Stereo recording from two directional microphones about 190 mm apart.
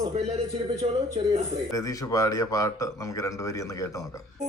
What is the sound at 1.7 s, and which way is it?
Speech, 15° left (ahead or behind).